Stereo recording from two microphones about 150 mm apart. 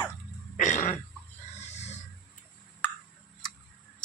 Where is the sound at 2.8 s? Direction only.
10° left (ahead or behind).